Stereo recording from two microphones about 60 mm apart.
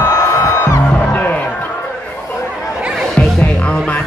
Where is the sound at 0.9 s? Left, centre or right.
Left.